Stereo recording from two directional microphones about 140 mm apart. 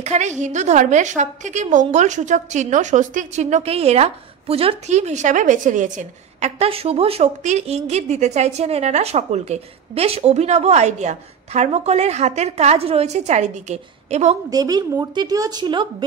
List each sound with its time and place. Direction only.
0.0 s a woman's voice: 55° right (ahead or behind)
14.5 s speech: 25° right (ahead or behind)